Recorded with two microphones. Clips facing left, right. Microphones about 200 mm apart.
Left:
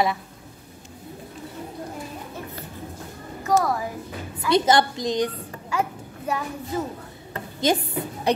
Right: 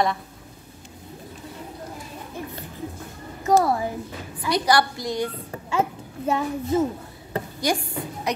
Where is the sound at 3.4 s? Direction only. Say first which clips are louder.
Right 3 dB; 25° right (ahead or behind).